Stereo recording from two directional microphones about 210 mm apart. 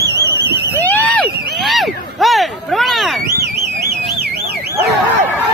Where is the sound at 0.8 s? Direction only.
10° left (ahead or behind).